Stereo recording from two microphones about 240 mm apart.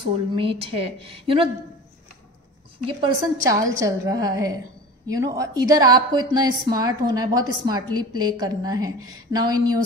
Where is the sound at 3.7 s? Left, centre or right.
Centre.